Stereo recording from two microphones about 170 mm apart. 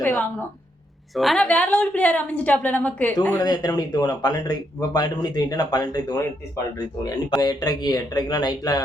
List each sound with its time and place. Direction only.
0.0 s a woman's voice: 10° left (ahead or behind)
1.1 s a woman's voice: centre (ahead or behind)
3.4 s speech: 25° left (ahead or behind)
7.3 s speech: 25° left (ahead or behind)